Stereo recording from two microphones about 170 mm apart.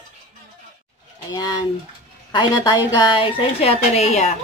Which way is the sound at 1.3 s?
25° left (ahead or behind).